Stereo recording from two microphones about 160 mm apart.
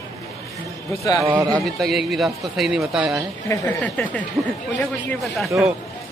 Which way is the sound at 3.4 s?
10° left (ahead or behind).